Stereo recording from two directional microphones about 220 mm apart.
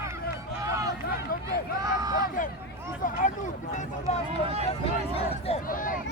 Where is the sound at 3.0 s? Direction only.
35° left (ahead or behind).